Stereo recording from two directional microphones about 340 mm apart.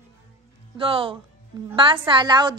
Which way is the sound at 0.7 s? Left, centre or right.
Centre.